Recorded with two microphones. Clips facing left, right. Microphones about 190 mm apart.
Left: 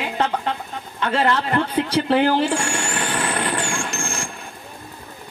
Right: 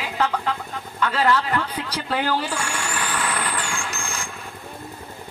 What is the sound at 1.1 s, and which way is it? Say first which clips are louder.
Speech: left 2 dB; 25° left (ahead or behind).